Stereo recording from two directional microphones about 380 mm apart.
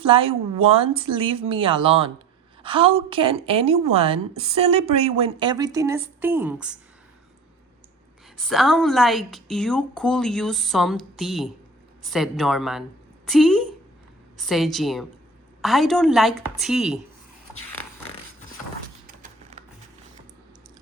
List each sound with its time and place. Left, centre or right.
0.0 s a woman's voice: centre
8.4 s a woman's voice: centre
19.0 s a sound: right